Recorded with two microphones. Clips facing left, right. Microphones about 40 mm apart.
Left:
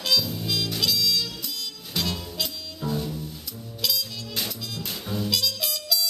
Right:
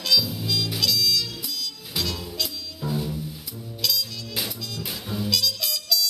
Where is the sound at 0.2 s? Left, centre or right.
Centre.